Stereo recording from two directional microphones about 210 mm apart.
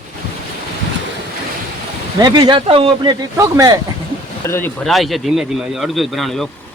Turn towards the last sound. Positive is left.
turn(degrees=0)  # may be behind; listen again after turning